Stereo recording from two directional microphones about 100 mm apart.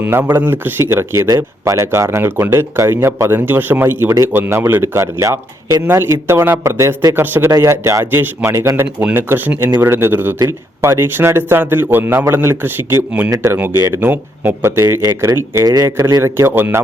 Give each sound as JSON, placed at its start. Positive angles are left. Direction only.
{"t": 0.0, "sound": "speech", "side_deg": -20}
{"t": 13.3, "sound": "speech", "side_deg": -30}